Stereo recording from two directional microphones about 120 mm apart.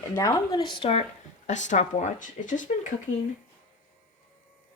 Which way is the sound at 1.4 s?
90° left.